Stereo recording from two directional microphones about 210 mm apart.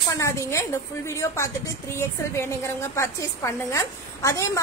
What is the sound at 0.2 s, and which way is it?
Speech, 15° left (ahead or behind).